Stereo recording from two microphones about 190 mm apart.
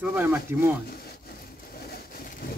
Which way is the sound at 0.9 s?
55° left (ahead or behind).